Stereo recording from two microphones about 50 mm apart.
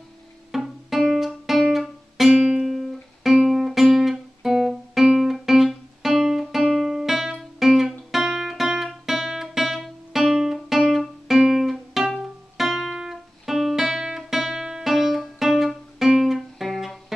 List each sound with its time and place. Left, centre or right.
0.5 s music: centre
3.3 s guitar: centre
12.2 s music: centre